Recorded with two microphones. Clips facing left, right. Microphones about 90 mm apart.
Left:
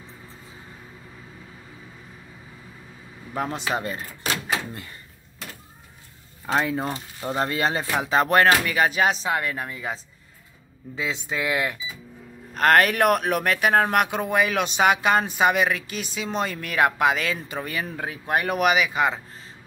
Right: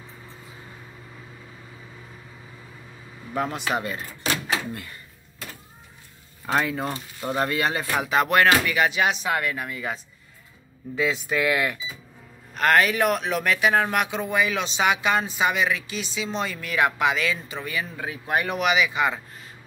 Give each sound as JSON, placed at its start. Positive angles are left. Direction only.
{"t": 3.3, "sound": "speech", "side_deg": 25}
{"t": 6.5, "sound": "speech", "side_deg": 20}
{"t": 11.0, "sound": "speech", "side_deg": 20}
{"t": 12.5, "sound": "speech", "side_deg": 45}